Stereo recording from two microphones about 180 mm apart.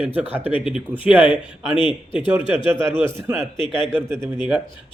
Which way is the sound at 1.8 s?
25° left (ahead or behind).